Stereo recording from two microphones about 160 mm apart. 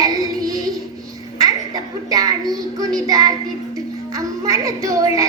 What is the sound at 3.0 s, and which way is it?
Child singing, 20° right (ahead or behind).